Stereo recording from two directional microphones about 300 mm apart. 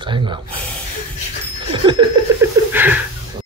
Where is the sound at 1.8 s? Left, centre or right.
Centre.